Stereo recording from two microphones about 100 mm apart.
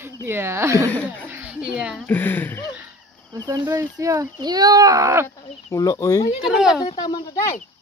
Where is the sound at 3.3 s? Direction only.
40° right (ahead or behind).